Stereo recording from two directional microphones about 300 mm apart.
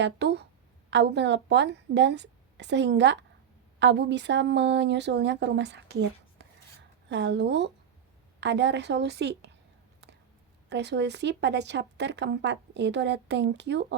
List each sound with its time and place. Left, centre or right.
0.0 s a woman's voice: right
10.7 s a woman's voice: right